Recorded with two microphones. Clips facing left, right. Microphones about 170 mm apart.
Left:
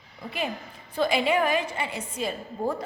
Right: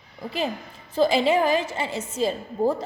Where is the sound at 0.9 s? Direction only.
30° right (ahead or behind).